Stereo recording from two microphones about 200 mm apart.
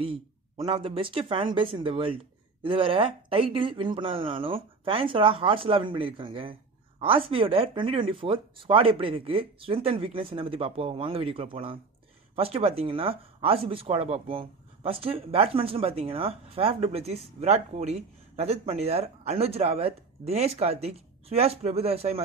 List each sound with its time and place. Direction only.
0.0 s speech: 25° right (ahead or behind)